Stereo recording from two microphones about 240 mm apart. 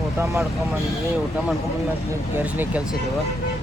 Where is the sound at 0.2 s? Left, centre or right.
Centre.